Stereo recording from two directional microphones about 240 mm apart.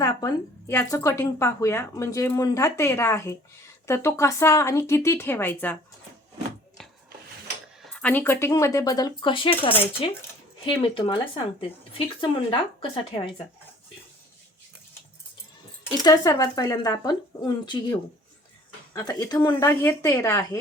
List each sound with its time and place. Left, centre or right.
0.0 s a woman's voice: centre
7.8 s a woman's voice: centre; by 13.3 s left
16.0 s a woman's voice: centre
18.9 s a woman's voice: centre